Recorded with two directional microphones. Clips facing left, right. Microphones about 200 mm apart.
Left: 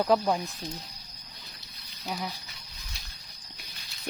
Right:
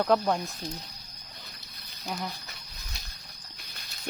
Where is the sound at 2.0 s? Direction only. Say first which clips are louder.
Even; 5° left (ahead or behind).